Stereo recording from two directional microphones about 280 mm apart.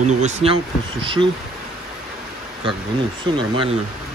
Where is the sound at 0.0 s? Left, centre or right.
Right.